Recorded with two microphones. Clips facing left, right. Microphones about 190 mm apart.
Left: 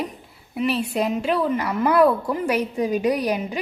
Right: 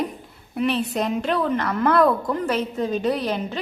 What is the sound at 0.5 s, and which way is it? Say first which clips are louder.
A woman's voice: even; 5° left (ahead or behind).